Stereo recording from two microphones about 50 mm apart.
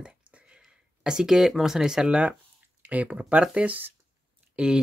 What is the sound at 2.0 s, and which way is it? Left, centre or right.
Speech, right.